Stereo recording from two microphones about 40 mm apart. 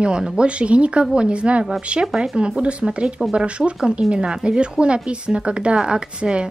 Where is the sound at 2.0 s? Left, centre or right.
Centre.